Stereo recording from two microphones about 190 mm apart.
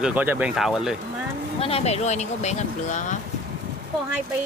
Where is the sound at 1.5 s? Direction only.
30° left (ahead or behind).